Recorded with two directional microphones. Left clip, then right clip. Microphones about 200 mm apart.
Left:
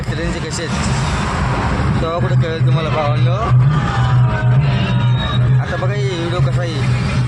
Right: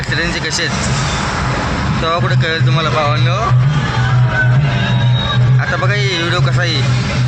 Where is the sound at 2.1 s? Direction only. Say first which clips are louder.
Right 8 dB; 5° left (ahead or behind).